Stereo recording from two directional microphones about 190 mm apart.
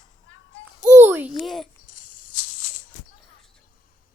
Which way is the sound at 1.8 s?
45° left (ahead or behind).